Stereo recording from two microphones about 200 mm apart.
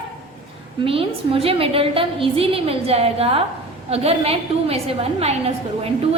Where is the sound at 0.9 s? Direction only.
30° right (ahead or behind).